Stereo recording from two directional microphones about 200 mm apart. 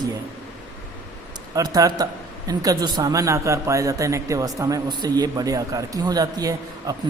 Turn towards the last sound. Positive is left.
turn(degrees=-15)  # may be behind; listen again after turning